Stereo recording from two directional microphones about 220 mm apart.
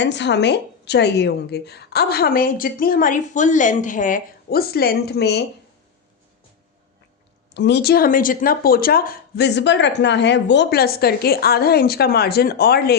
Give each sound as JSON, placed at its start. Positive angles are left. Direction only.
{"t": 0.0, "sound": "speech", "side_deg": 55}
{"t": 7.5, "sound": "speech", "side_deg": 50}